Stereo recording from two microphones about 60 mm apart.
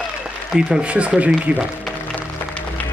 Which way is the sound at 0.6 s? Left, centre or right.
Centre.